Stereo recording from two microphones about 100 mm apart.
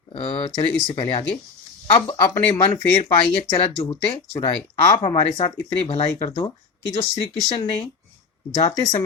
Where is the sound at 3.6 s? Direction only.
80° left.